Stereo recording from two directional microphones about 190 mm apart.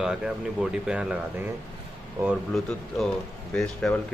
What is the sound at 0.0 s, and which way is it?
Speech, 5° right (ahead or behind).